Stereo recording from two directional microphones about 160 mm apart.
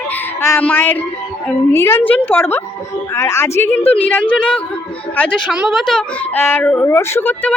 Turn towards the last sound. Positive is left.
turn(degrees=10)  # may be behind; listen again after turning